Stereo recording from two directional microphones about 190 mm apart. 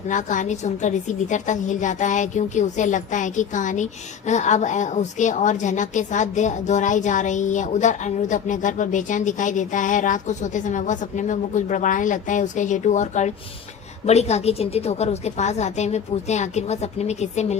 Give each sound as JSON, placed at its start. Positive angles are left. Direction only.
{"t": 0.1, "sound": "a woman's voice", "side_deg": 40}